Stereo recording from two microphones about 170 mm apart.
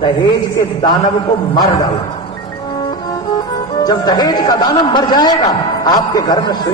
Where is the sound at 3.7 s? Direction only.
25° left (ahead or behind).